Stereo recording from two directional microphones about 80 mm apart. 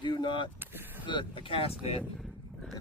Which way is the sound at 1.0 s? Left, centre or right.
Left.